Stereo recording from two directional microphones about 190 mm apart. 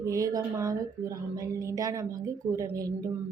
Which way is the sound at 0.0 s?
15° right (ahead or behind).